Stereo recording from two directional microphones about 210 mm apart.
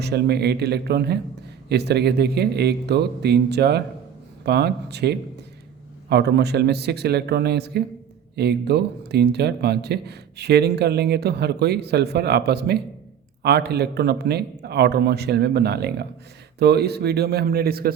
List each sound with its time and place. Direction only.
0.0 s speech: 50° right (ahead or behind)